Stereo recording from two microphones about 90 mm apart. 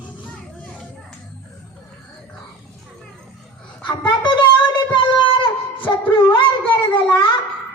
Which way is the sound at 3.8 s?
60° left (ahead or behind).